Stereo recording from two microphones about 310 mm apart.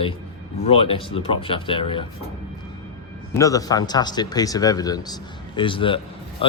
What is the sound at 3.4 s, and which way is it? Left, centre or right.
Speech, centre.